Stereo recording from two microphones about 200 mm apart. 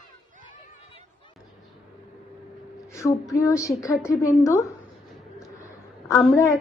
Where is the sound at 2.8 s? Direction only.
15° left (ahead or behind).